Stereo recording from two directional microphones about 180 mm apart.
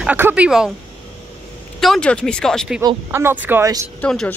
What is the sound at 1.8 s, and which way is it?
Speech, 5° left (ahead or behind).